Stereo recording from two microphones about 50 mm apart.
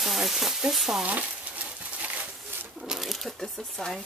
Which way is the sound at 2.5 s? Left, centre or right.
Right.